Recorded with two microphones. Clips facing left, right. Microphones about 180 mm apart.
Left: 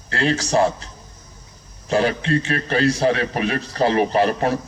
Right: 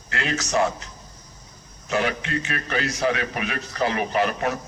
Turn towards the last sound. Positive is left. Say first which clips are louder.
# left 5 dB
turn(degrees=30)  # may be behind; listen again after turning